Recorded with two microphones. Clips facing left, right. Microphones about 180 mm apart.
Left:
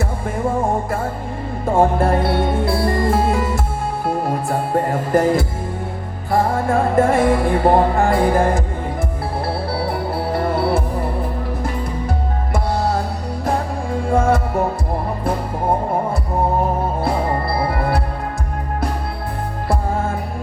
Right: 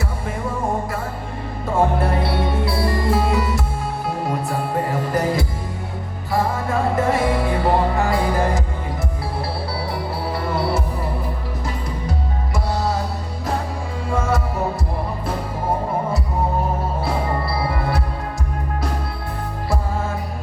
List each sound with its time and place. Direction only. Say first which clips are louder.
0.3 s music: left 5 dB; 50° left (ahead or behind)
9.8 s music: left 4 dB; 55° left (ahead or behind)
14.1 s music: left 5 dB; 55° left (ahead or behind)
17.7 s music: left 3 dB; 55° left (ahead or behind)